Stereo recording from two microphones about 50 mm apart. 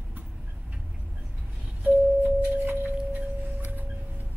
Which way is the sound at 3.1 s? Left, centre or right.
Right.